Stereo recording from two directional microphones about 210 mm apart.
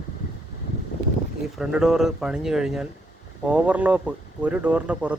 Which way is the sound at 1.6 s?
Centre (ahead or behind).